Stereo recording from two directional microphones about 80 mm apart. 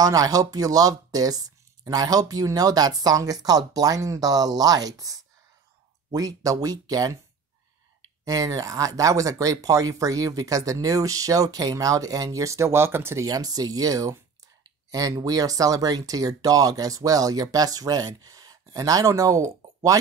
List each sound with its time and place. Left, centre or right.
0.0 s speech: right
8.3 s speech: right
13.2 s speech: right